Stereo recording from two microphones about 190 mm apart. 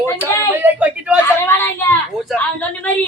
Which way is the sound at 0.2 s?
10° right (ahead or behind).